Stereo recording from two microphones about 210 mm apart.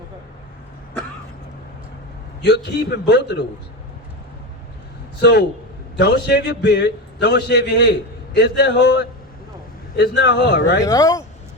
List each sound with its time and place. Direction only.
2.4 s a man's voice: 55° left (ahead or behind)
5.2 s a man's voice: 50° left (ahead or behind)
10.8 s speech: 15° left (ahead or behind)